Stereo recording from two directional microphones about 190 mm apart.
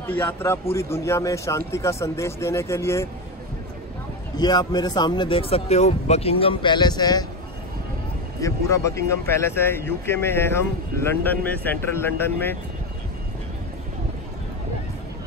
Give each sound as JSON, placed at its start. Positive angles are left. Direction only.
{"t": 0.1, "sound": "speech", "side_deg": 10}
{"t": 4.4, "sound": "speech", "side_deg": 20}
{"t": 8.4, "sound": "speech", "side_deg": 15}